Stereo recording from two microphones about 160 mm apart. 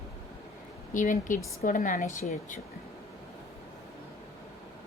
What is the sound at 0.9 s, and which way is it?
A woman's voice, 55° left (ahead or behind).